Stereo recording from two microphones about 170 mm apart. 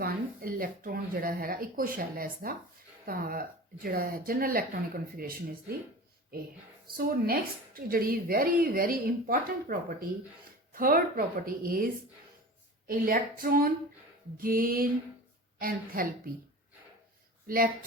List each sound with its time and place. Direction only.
0.0 s a woman's voice: 60° right (ahead or behind)
6.8 s a woman's voice: 60° right (ahead or behind)
12.9 s a woman's voice: 55° right (ahead or behind)
17.4 s speech: 60° right (ahead or behind)